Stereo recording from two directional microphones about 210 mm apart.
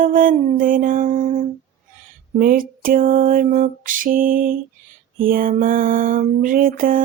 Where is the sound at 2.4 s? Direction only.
40° right (ahead or behind).